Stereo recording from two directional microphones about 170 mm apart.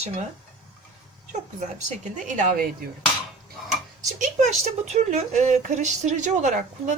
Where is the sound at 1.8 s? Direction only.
45° right (ahead or behind).